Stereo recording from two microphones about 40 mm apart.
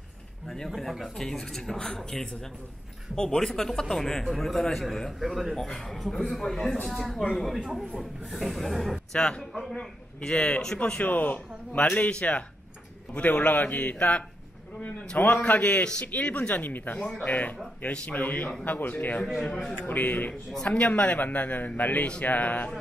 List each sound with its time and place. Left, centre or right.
0.7 s a sound: centre
1.2 s speech: centre
3.2 s speech: centre
5.2 s speech: centre
5.6 s speech: centre
6.9 s a sound: centre
9.1 s speech: left
9.4 s a sound: centre
10.2 s speech: left
11.1 s a man's voice: left
13.9 s speech: left
16.6 s a man's voice: left
19.5 s speech: centre
19.9 s a man's voice: left